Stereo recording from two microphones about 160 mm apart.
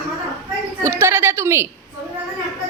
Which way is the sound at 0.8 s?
15° right (ahead or behind).